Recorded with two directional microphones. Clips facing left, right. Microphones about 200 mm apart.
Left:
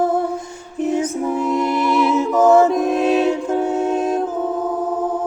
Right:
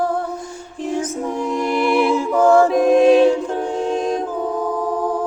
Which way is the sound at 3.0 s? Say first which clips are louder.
Right 5 dB; 5° left (ahead or behind).